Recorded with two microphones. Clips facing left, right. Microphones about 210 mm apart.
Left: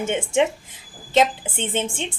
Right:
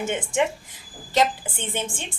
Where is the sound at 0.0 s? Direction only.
25° left (ahead or behind).